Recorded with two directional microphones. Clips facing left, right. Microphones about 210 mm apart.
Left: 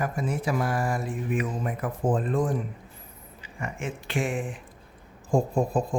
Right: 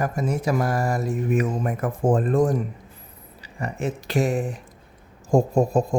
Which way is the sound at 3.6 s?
40° right (ahead or behind).